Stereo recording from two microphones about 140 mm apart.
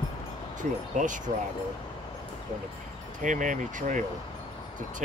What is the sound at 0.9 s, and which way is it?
Speech, 65° right (ahead or behind).